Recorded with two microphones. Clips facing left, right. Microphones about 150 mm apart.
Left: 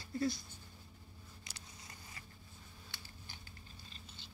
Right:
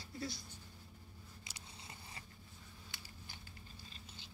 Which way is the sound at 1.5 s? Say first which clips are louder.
Right 2 dB; 25° right (ahead or behind).